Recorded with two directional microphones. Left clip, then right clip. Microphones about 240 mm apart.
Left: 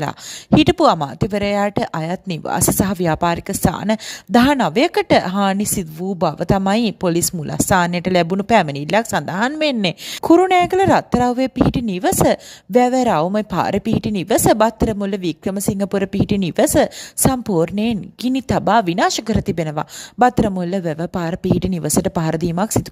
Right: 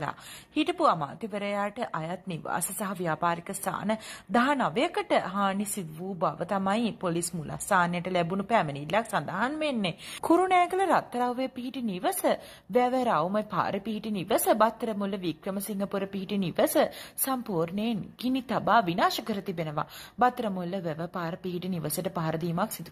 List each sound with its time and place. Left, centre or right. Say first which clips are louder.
0.6 s a woman's voice: left 11 dB; left